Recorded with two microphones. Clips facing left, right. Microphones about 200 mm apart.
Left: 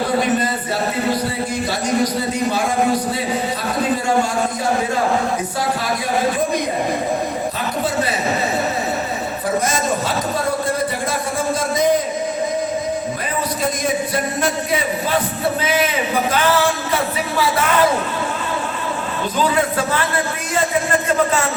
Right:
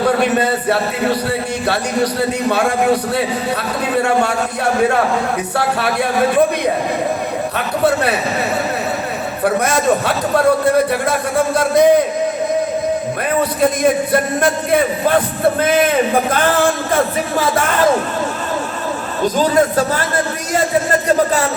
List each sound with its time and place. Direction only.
0.2 s a man's voice: 65° right (ahead or behind)
5.5 s a man's voice: 65° right (ahead or behind)
7.9 s a man's voice: 65° right (ahead or behind)
9.4 s a man's voice: 65° right (ahead or behind)
11.5 s a man's voice: 60° right (ahead or behind)
13.6 s a man's voice: 55° right (ahead or behind)
19.2 s speech: 40° right (ahead or behind)